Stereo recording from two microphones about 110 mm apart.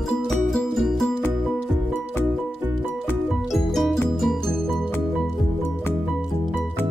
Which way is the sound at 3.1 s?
5° right (ahead or behind).